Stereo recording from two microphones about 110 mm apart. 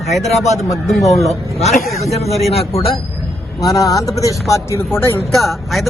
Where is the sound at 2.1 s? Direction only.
75° left (ahead or behind).